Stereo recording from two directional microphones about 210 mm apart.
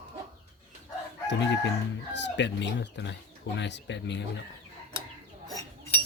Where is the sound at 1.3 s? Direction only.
60° left (ahead or behind).